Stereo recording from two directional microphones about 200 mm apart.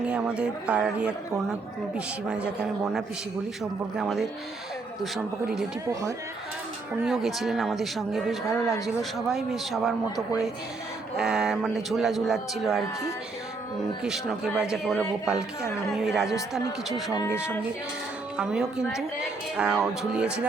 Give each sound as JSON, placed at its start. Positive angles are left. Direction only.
{"t": 0.0, "sound": "a man's voice", "side_deg": -5}
{"t": 2.2, "sound": "a man's voice", "side_deg": -5}
{"t": 5.9, "sound": "speech", "side_deg": -15}
{"t": 7.0, "sound": "a man's voice", "side_deg": 0}
{"t": 8.4, "sound": "speech", "side_deg": 15}
{"t": 9.0, "sound": "a man's voice", "side_deg": 0}
{"t": 11.2, "sound": "a man's voice", "side_deg": -5}
{"t": 19.5, "sound": "a man's voice", "side_deg": -5}